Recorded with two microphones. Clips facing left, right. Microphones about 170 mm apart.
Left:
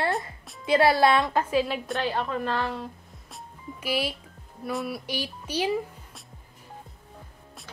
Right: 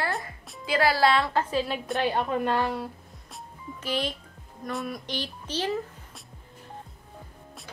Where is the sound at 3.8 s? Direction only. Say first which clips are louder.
Left 1 dB; 10° left (ahead or behind).